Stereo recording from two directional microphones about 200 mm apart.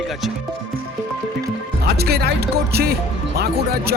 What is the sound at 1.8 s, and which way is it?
Speech, 55° right (ahead or behind).